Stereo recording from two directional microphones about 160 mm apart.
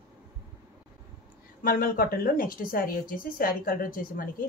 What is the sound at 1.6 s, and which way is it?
Speech, 65° left (ahead or behind).